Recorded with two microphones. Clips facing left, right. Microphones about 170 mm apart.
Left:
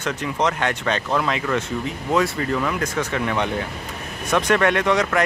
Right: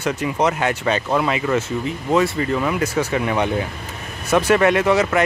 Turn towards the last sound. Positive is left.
turn(degrees=-5)  # may be behind; listen again after turning